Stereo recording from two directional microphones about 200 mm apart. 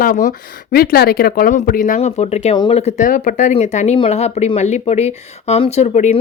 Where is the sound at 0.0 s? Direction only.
40° left (ahead or behind).